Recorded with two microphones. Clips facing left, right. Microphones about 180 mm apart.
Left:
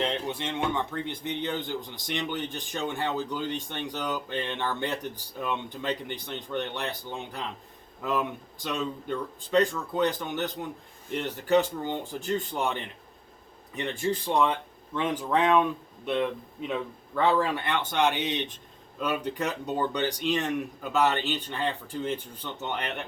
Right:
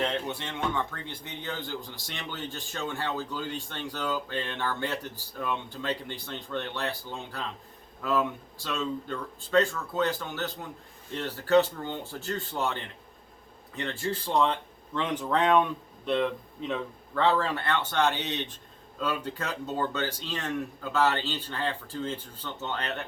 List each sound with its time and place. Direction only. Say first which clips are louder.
0.0 s speech: left 1 dB; 15° left (ahead or behind)